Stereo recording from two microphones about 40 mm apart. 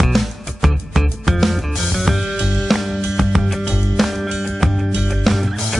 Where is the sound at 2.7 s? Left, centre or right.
Centre.